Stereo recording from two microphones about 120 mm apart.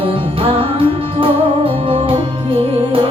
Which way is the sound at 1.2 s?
50° right (ahead or behind).